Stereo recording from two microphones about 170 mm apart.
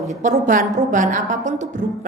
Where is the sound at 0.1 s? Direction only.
45° right (ahead or behind).